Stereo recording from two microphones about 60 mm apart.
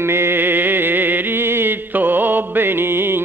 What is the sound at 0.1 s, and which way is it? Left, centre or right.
Mantra, right.